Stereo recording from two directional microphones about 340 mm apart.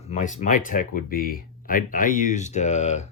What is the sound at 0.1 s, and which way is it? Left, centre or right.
Speech, centre.